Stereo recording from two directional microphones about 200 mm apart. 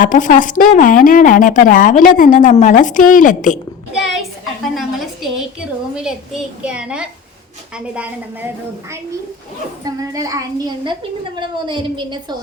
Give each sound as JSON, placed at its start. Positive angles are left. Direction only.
{"t": 0.0, "sound": "a woman's voice", "side_deg": 40}
{"t": 4.6, "sound": "a woman's voice", "side_deg": 0}
{"t": 9.8, "sound": "a child's voice", "side_deg": -20}